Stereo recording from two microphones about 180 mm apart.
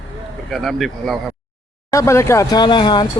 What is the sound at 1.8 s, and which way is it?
Speech, 15° left (ahead or behind).